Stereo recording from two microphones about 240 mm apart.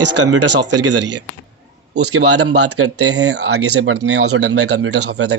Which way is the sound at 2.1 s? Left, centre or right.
Right.